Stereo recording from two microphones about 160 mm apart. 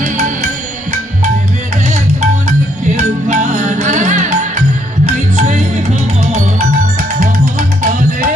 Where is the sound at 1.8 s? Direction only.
45° right (ahead or behind).